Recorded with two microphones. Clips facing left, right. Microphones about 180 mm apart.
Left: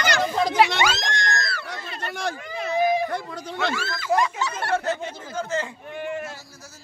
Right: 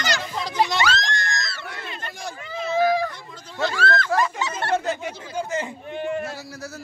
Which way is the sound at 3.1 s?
65° left (ahead or behind).